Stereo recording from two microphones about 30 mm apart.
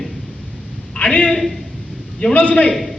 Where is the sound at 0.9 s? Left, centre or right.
Left.